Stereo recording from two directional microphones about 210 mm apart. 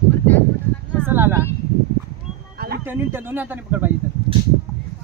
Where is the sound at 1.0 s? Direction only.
10° right (ahead or behind).